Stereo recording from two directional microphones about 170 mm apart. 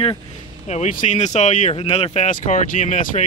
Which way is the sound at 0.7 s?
45° left (ahead or behind).